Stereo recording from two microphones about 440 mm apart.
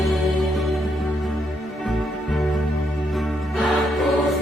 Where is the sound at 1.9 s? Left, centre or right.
Centre.